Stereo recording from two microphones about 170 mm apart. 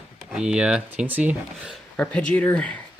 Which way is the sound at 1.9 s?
5° left (ahead or behind).